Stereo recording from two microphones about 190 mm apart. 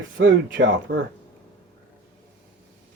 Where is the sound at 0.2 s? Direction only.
75° right (ahead or behind).